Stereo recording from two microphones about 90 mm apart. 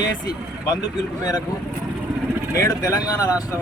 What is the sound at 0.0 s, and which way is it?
Speech, 45° left (ahead or behind).